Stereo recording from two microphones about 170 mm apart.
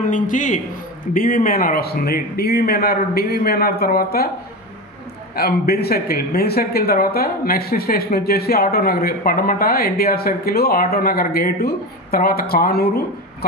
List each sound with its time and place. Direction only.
0.0 s a man's voice: 50° left (ahead or behind)
5.3 s speech: 65° left (ahead or behind)